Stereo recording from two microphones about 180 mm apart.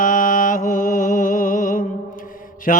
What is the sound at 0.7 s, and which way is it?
Music, 50° left (ahead or behind).